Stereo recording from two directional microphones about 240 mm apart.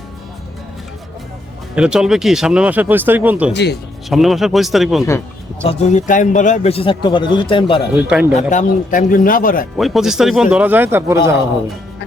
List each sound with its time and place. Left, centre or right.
1.7 s speech: centre
3.5 s speech: left
4.1 s speech: centre
5.6 s a man's voice: left
7.9 s speech: centre
8.4 s a man's voice: left
9.7 s speech: centre